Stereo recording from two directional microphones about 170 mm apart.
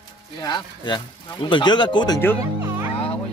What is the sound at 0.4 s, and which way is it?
Speech, 25° left (ahead or behind).